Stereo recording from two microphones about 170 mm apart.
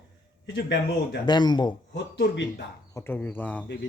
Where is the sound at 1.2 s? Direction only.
25° left (ahead or behind).